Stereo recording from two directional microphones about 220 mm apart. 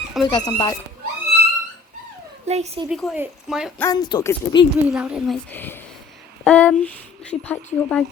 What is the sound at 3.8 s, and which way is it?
Speech, 15° left (ahead or behind).